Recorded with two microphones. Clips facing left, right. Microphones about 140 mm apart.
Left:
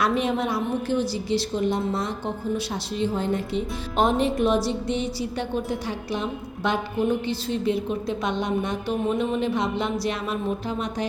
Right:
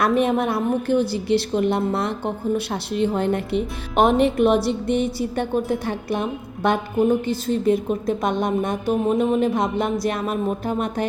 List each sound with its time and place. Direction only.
0.0 s a woman's voice: 50° right (ahead or behind)